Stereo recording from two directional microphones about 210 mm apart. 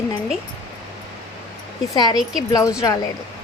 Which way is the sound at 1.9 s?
20° left (ahead or behind).